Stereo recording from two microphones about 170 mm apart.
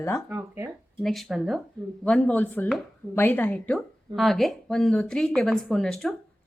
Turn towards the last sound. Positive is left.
turn(degrees=5)  # may be behind; listen again after turning